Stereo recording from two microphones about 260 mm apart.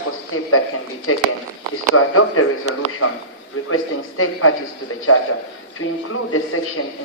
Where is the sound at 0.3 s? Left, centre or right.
Left.